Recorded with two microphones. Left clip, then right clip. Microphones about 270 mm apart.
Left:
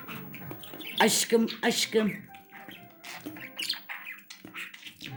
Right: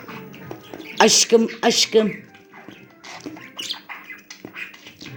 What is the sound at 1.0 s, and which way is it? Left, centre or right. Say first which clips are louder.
Speech: right 10 dB; centre.